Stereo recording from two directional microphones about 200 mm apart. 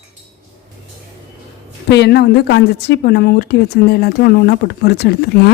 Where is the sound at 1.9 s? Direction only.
55° left (ahead or behind).